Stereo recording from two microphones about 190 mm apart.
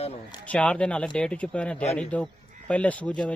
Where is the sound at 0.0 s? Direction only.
30° left (ahead or behind).